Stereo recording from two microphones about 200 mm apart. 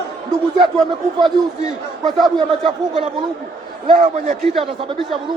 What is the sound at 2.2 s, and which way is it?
Speech, 25° right (ahead or behind).